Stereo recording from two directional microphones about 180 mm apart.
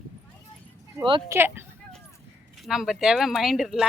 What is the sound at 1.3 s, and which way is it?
Speech, 10° right (ahead or behind).